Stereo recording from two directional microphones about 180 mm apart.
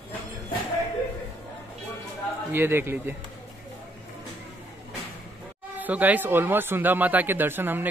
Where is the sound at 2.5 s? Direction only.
10° right (ahead or behind).